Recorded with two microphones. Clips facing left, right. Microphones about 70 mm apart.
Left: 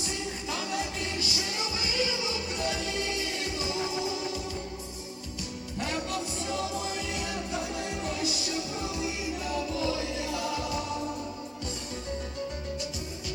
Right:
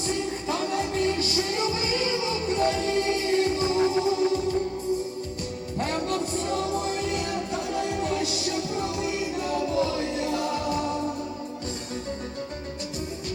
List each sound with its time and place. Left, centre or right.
0.0 s music: right
5.8 s music: right